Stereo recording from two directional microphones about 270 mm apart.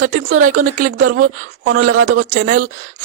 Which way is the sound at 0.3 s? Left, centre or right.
Right.